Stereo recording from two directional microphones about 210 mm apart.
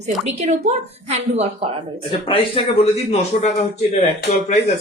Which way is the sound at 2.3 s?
25° left (ahead or behind).